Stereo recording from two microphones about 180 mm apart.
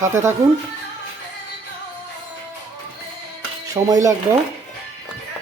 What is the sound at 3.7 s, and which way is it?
Speech, 20° right (ahead or behind).